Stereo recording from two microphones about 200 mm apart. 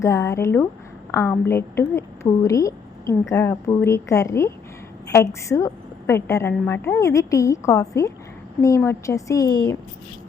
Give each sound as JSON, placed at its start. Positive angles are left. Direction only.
{"t": 0.0, "sound": "a woman's voice", "side_deg": 15}